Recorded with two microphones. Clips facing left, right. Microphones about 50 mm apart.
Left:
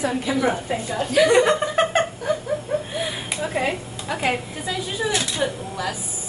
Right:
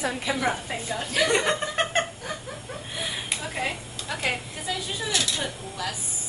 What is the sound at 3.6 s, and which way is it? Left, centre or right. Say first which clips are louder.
A woman's voice: left 7 dB; centre.